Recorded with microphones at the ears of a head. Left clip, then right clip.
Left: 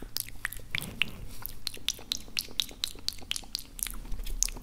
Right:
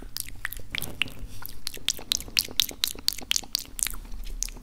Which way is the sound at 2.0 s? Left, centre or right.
Right.